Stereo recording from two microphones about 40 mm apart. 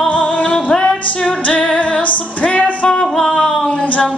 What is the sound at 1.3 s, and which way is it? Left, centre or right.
Music, left.